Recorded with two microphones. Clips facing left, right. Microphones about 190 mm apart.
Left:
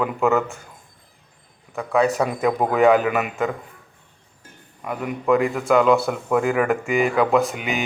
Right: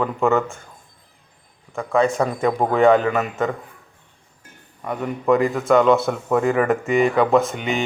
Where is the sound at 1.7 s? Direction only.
Centre (ahead or behind).